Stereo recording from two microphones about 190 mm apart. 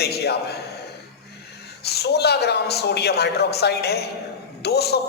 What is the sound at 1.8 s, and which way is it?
A man's voice, 60° left (ahead or behind).